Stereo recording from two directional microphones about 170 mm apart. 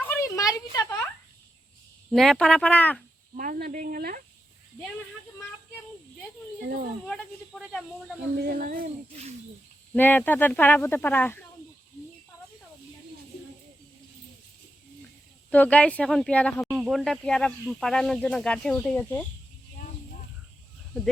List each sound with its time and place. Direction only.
0.0 s a sound: 15° left (ahead or behind)
2.0 s speech: centre (ahead or behind)
3.3 s speech: 50° right (ahead or behind)
7.1 s speech: 5° left (ahead or behind)
8.5 s speech: 60° right (ahead or behind)
9.9 s speech: 10° left (ahead or behind)
15.4 s speech: 10° left (ahead or behind)
16.7 s speech: centre (ahead or behind)